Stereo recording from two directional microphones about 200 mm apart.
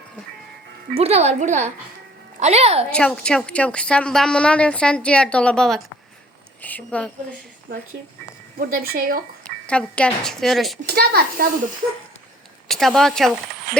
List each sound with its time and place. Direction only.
0.9 s a woman's voice: 30° right (ahead or behind)
2.9 s a woman's voice: 5° left (ahead or behind)
8.5 s speech: 45° right (ahead or behind)
9.6 s a woman's voice: 5° left (ahead or behind)
10.8 s speech: 50° right (ahead or behind)
12.6 s a woman's voice: centre (ahead or behind)